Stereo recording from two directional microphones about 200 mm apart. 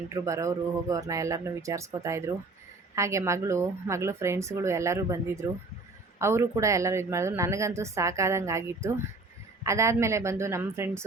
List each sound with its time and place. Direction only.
0.1 s speech: 15° right (ahead or behind)